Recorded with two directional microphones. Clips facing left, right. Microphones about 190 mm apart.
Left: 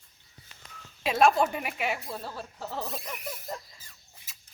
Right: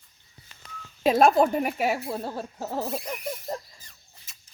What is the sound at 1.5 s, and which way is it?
Speech, 40° right (ahead or behind).